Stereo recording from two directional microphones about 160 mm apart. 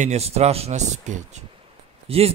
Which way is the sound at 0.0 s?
40° right (ahead or behind).